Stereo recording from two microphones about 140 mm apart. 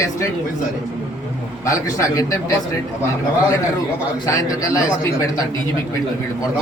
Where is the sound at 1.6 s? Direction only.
25° left (ahead or behind).